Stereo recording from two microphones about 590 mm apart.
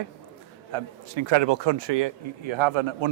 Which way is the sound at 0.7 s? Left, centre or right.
Right.